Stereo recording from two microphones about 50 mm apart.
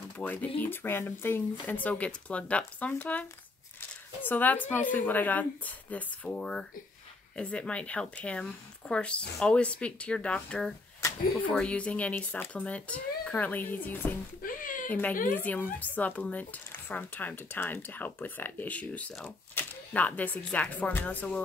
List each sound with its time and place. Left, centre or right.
0.2 s speech: left
1.8 s speech: left
6.2 s speech: left
19.2 s a sound: left
19.9 s speech: left